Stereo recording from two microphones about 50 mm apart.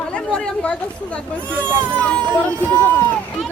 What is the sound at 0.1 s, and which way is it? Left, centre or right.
Speech, left.